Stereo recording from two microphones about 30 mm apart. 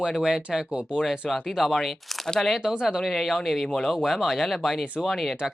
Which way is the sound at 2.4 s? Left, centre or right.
Centre.